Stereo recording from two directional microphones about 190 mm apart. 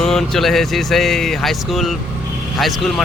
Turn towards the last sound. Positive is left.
turn(degrees=0)  # may be behind; listen again after turning